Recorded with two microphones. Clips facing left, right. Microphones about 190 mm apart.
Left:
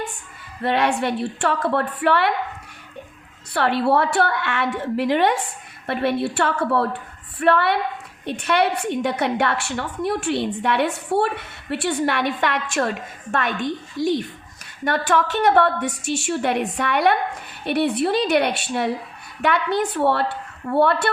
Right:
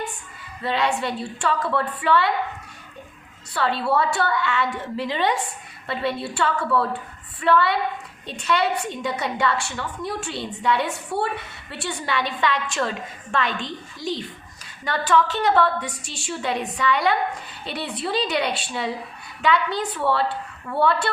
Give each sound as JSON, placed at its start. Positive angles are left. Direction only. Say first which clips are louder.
{"t": 0.6, "sound": "a woman's voice", "louder": "left 3 dB", "side_deg": 60}
{"t": 3.5, "sound": "a woman's voice", "louder": "left 4 dB", "side_deg": 60}
{"t": 20.7, "sound": "speech", "louder": "left 7 dB", "side_deg": 40}